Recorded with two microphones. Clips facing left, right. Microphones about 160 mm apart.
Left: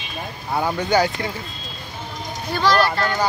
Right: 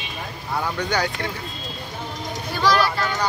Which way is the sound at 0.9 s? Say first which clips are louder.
Left 8 dB; 5° left (ahead or behind).